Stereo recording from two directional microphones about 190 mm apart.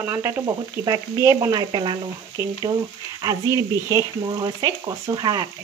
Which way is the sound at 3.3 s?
15° right (ahead or behind).